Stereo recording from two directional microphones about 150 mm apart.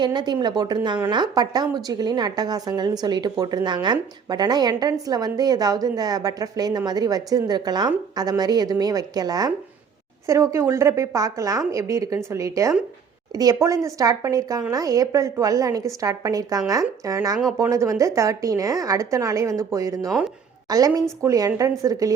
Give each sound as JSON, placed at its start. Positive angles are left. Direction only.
{"t": 0.0, "sound": "a woman's voice", "side_deg": -30}